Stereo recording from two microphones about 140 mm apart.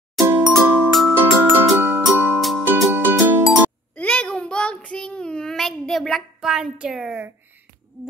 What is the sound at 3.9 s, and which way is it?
Child singing, 10° left (ahead or behind).